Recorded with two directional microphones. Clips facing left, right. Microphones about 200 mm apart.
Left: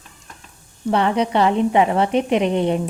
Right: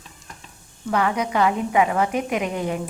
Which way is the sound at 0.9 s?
30° left (ahead or behind).